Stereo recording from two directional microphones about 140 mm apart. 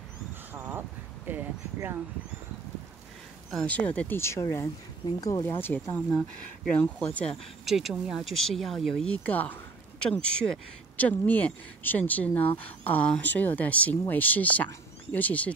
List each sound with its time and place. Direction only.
0.5 s a sound: 15° right (ahead or behind)
3.4 s speech: 5° left (ahead or behind)
6.1 s speech: centre (ahead or behind)
6.8 s speech: 10° left (ahead or behind)
7.6 s speech: centre (ahead or behind)